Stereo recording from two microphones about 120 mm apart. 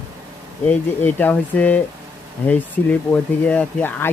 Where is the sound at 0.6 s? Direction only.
15° left (ahead or behind).